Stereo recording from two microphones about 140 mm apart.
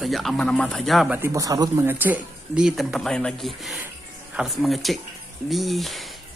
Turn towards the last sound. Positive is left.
turn(degrees=0)  # may be behind; listen again after turning